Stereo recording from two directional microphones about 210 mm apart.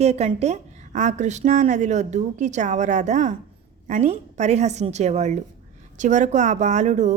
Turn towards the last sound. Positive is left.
turn(degrees=-35)  # may be behind; listen again after turning